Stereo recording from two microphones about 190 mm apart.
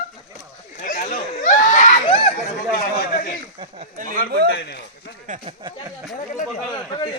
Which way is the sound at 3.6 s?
30° right (ahead or behind).